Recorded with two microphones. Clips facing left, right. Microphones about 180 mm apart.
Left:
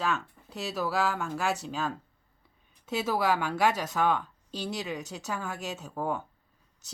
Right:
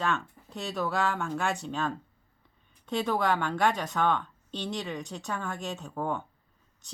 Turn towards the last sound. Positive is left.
turn(degrees=5)  # may be behind; listen again after turning